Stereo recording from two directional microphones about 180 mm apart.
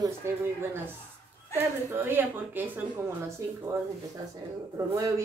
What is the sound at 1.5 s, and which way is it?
A woman's voice, 10° right (ahead or behind).